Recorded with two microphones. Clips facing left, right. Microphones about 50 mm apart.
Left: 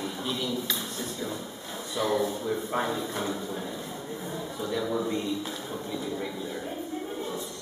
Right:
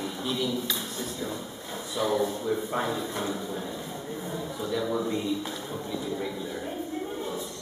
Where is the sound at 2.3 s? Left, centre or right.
Centre.